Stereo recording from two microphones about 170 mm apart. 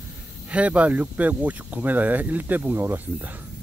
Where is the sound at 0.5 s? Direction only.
10° right (ahead or behind).